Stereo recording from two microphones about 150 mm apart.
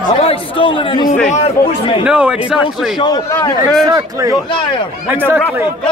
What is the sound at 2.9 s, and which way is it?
Speech, 30° left (ahead or behind).